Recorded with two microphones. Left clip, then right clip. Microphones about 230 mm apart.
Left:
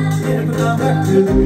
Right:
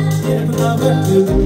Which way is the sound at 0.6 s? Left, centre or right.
Right.